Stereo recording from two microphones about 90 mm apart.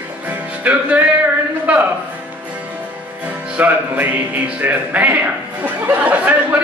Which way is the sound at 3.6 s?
20° right (ahead or behind).